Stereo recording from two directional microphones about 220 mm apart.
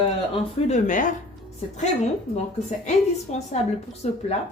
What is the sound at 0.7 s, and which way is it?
Speech, 35° left (ahead or behind).